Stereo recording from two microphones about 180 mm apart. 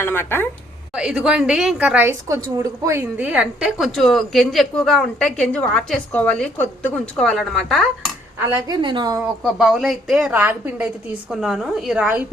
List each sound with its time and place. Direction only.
0.0 s a woman's voice: 10° left (ahead or behind)
0.9 s a woman's voice: 5° right (ahead or behind)
8.6 s a woman's voice: 25° right (ahead or behind)
9.2 s a woman's voice: 5° right (ahead or behind)